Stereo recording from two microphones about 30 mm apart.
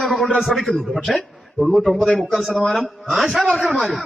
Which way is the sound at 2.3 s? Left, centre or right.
Centre.